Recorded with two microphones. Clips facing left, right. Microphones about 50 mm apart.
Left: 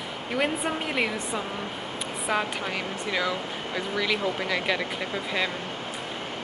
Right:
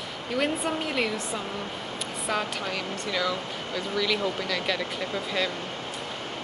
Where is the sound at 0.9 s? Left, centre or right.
Centre.